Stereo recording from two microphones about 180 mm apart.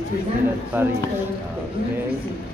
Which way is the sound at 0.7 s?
10° right (ahead or behind).